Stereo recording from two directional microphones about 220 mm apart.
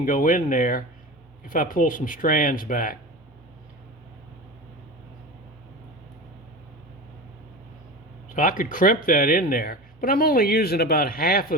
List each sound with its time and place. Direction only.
0.0 s speech: 35° left (ahead or behind)
8.3 s speech: 35° left (ahead or behind)